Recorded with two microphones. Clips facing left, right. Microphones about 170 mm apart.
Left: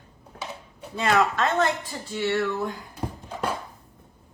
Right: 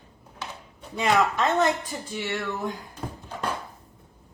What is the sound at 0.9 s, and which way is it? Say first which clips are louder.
Speech: even; 15° right (ahead or behind).